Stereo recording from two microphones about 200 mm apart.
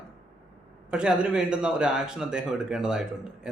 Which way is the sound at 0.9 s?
5° right (ahead or behind).